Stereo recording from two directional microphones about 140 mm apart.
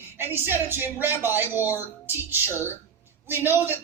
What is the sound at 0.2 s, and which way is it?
Speech, 15° right (ahead or behind).